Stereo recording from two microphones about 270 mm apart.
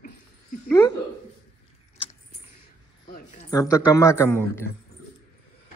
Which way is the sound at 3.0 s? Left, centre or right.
Left.